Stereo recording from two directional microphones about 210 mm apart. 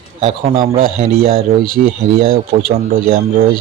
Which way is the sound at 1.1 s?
45° right (ahead or behind).